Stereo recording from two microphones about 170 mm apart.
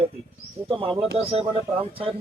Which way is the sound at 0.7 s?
30° right (ahead or behind).